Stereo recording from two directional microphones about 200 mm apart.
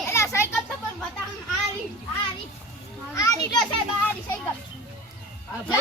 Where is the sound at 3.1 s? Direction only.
20° left (ahead or behind).